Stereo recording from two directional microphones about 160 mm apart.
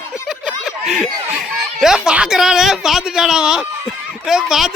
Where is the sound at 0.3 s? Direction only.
5° right (ahead or behind).